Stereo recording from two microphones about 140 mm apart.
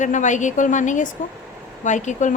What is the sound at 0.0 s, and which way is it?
A woman's voice, 60° left (ahead or behind).